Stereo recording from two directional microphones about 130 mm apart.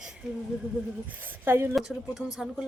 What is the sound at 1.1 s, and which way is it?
Speech, 15° right (ahead or behind).